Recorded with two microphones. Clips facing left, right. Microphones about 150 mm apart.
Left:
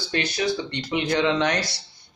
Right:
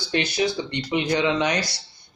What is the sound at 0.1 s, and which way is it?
Speech, 15° right (ahead or behind).